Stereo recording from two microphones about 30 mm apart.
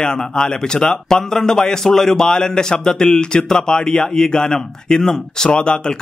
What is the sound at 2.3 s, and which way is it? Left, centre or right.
Speech, left.